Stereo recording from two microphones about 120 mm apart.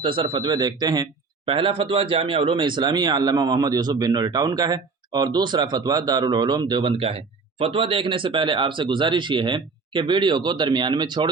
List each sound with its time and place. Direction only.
0.0 s speech: 45° right (ahead or behind)